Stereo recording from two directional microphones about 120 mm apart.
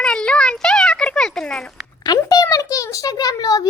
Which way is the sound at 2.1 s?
30° left (ahead or behind).